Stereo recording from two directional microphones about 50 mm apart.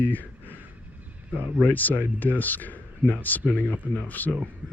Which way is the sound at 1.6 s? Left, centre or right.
Left.